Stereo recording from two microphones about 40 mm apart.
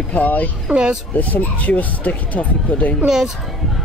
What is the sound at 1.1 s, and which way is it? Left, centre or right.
Speech, left.